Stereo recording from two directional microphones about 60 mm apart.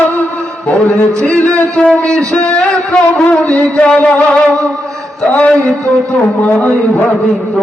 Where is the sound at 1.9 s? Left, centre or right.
Centre.